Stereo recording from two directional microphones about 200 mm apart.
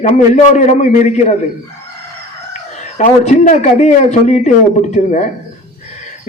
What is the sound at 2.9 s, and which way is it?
A man's voice, 35° left (ahead or behind).